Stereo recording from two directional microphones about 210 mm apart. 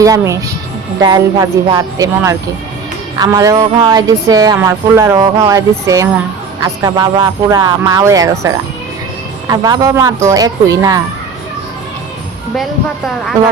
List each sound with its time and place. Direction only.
0.0 s music: 15° right (ahead or behind)